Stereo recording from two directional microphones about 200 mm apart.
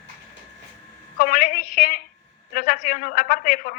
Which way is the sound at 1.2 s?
45° left (ahead or behind).